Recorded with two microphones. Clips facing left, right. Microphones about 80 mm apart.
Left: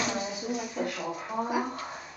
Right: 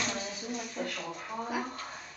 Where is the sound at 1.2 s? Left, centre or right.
Centre.